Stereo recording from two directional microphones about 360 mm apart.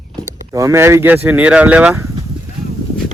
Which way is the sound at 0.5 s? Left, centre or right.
Centre.